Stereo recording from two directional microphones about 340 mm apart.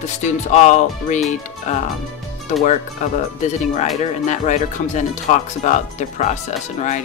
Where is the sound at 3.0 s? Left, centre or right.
Left.